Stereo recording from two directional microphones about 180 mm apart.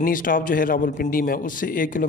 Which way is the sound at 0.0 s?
50° left (ahead or behind).